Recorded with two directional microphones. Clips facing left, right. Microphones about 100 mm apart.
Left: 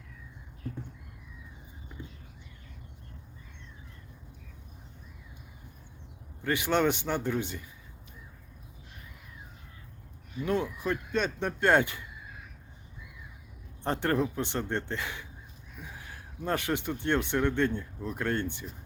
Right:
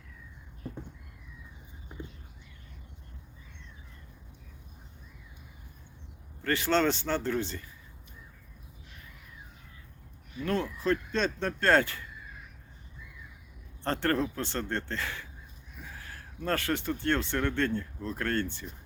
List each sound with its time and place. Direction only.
6.4 s speech: 15° left (ahead or behind)
10.4 s speech: 15° left (ahead or behind)
13.8 s speech: 15° left (ahead or behind)